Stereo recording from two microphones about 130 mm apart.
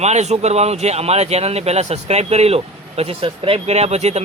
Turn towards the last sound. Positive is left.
turn(degrees=-60)  # may be behind; listen again after turning